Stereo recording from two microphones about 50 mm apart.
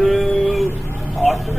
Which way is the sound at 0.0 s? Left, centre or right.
Centre.